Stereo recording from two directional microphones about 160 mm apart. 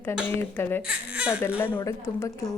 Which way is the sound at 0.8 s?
10° right (ahead or behind).